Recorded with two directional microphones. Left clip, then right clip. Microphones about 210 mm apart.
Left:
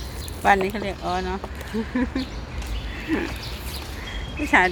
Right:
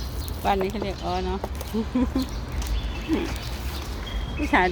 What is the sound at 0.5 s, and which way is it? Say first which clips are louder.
Speech: left 2 dB; 15° left (ahead or behind).